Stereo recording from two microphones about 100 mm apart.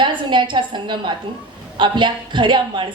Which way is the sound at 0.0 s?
50° right (ahead or behind).